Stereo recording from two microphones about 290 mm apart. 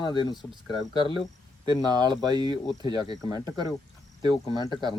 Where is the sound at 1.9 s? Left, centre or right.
Centre.